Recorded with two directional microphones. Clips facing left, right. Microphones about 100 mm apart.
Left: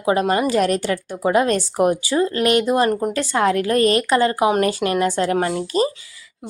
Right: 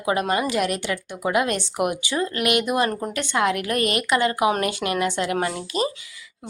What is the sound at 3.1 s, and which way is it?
A woman's voice, 35° left (ahead or behind).